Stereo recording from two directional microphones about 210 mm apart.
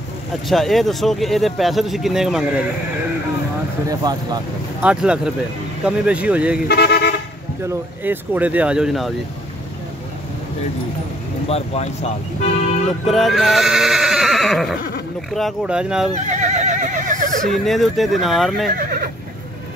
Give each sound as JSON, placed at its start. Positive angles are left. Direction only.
{"t": 0.5, "sound": "speech", "side_deg": 0}
{"t": 3.9, "sound": "speech", "side_deg": -20}
{"t": 4.8, "sound": "speech", "side_deg": -5}
{"t": 6.7, "sound": "speech", "side_deg": 50}
{"t": 7.6, "sound": "speech", "side_deg": -10}
{"t": 11.4, "sound": "speech", "side_deg": 30}
{"t": 13.0, "sound": "neigh", "side_deg": 0}
{"t": 15.3, "sound": "speech", "side_deg": 0}
{"t": 16.2, "sound": "neigh", "side_deg": -35}
{"t": 17.5, "sound": "speech", "side_deg": 0}
{"t": 18.7, "sound": "neigh", "side_deg": -45}